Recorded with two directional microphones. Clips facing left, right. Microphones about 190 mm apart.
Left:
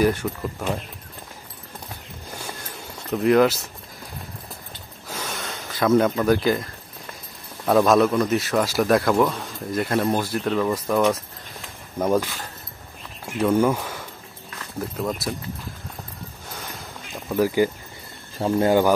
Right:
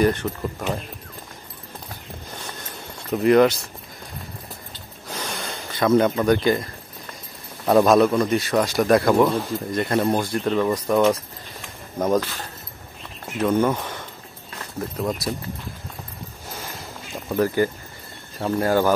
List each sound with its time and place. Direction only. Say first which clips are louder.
0.0 s speech: right 1 dB; 10° left (ahead or behind)
3.1 s speech: right 2 dB; centre (ahead or behind)
5.2 s a sound: right 1 dB; centre (ahead or behind)
7.6 s speech: right 1 dB; centre (ahead or behind)
13.4 s speech: left 1 dB; 10° left (ahead or behind)
17.4 s speech: left 1 dB; 10° left (ahead or behind)